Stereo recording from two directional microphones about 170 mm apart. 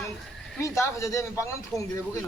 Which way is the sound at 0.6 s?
15° left (ahead or behind).